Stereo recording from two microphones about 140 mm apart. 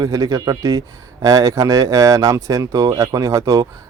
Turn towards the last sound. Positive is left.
turn(degrees=-25)  # may be behind; listen again after turning